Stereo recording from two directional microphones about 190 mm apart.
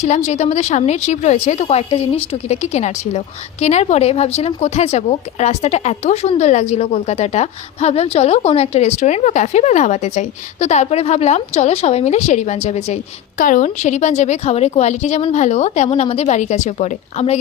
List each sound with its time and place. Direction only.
0.0 s a woman's voice: 40° left (ahead or behind)